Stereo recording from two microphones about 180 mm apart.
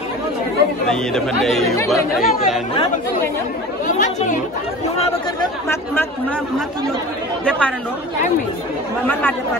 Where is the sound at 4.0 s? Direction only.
45° left (ahead or behind).